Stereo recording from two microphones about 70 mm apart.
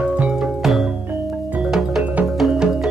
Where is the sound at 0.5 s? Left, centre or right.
Centre.